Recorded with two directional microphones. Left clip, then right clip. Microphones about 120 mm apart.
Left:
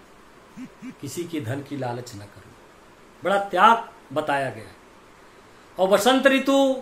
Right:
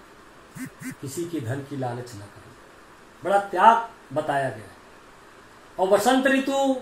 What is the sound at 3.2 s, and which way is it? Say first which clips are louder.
Speech: left 1 dB; 30° left (ahead or behind).